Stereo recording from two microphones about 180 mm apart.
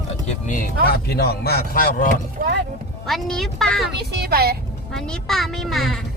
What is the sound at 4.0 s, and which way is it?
Speech, 60° right (ahead or behind).